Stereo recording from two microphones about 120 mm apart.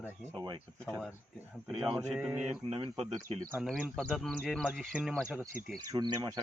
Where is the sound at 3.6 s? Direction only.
Centre (ahead or behind).